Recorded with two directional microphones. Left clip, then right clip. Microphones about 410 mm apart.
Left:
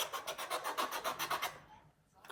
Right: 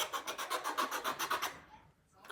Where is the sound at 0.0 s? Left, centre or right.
Centre.